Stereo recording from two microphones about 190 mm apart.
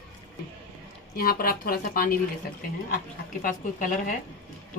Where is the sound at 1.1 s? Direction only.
50° left (ahead or behind).